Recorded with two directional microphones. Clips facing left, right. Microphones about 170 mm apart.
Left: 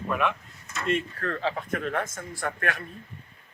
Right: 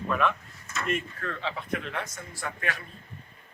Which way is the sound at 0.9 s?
35° left (ahead or behind).